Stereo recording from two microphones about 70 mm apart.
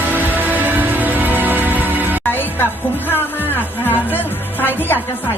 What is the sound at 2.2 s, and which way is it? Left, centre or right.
Music, left.